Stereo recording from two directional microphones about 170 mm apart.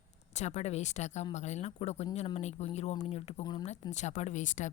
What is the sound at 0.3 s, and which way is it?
A woman's voice, 40° left (ahead or behind).